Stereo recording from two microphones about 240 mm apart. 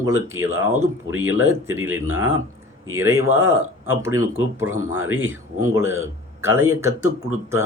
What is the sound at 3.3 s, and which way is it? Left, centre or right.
Speech, right.